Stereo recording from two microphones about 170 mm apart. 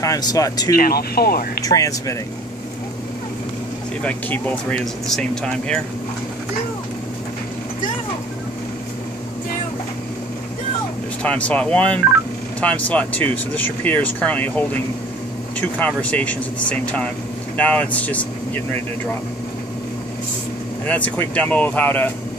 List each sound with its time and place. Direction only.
0.0 s speech: 20° left (ahead or behind)
0.7 s speech: 65° left (ahead or behind)
1.6 s speech: 20° left (ahead or behind)
4.0 s speech: 10° left (ahead or behind)
11.2 s speech: 10° left (ahead or behind)
16.0 s speech: 10° left (ahead or behind)
20.8 s speech: 10° left (ahead or behind)